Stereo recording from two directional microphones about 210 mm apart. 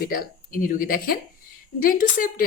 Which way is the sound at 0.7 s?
45° left (ahead or behind).